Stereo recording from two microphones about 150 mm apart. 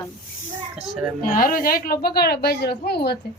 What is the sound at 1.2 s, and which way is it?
Speech, 70° left (ahead or behind).